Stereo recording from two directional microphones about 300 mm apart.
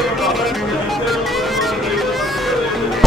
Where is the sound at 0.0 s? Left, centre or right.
Centre.